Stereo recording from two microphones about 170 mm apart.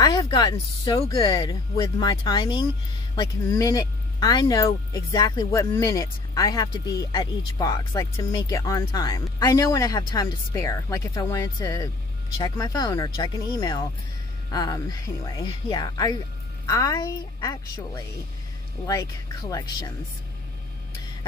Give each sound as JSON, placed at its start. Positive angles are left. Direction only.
{"t": 0.0, "sound": "speech", "side_deg": 25}